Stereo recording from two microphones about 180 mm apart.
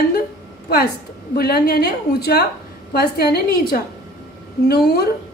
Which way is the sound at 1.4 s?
60° left (ahead or behind).